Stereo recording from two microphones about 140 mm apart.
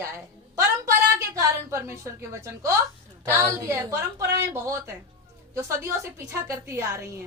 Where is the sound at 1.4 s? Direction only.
20° right (ahead or behind).